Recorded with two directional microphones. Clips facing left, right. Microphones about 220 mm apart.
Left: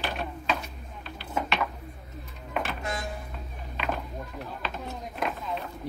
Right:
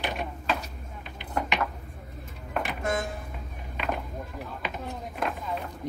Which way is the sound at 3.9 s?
15° right (ahead or behind).